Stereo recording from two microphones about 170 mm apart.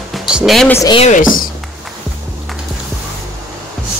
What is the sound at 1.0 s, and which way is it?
Speech, 50° left (ahead or behind).